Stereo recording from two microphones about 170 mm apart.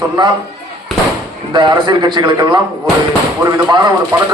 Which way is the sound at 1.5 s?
25° right (ahead or behind).